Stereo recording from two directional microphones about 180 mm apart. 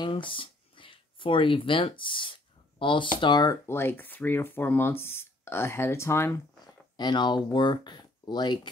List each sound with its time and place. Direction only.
0.0 s a sound: 30° left (ahead or behind)
3.2 s speech: 25° left (ahead or behind)
7.0 s speech: 25° left (ahead or behind)